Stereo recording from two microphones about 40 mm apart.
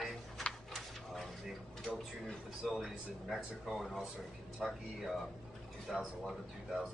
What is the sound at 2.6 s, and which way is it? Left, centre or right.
Speech, centre.